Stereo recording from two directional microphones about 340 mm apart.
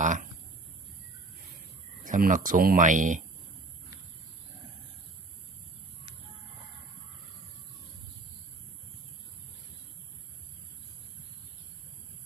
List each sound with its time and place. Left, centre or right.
0.0 s speech: right
2.0 s speech: right